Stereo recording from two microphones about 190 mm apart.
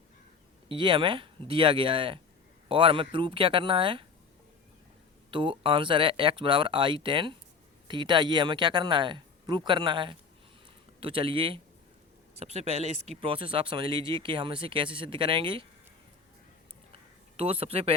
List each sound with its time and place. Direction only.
0.7 s speech: 25° right (ahead or behind)
5.3 s speech: 25° right (ahead or behind)
16.9 s a sound: 30° right (ahead or behind)